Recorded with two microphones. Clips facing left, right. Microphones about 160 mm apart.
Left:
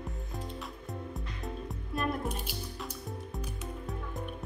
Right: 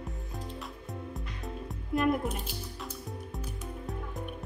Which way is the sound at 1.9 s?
20° right (ahead or behind).